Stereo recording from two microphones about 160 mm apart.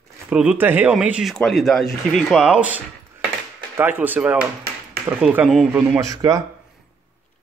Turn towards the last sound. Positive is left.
turn(degrees=-20)  # may be behind; listen again after turning